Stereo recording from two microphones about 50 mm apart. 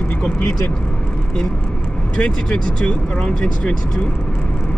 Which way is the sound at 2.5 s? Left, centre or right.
Centre.